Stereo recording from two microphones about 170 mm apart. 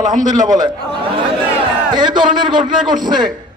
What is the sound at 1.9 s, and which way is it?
A man's voice, 25° right (ahead or behind).